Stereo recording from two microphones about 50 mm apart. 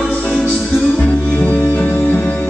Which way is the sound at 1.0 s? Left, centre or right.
Left.